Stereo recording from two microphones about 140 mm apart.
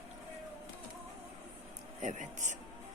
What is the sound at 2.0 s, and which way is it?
Speech, 60° right (ahead or behind).